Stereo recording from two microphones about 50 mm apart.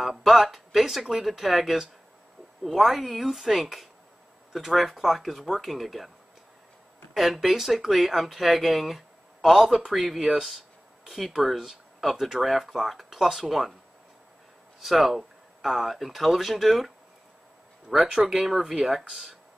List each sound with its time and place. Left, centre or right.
0.0 s speech: centre
7.2 s speech: centre
14.8 s speech: centre
18.1 s speech: centre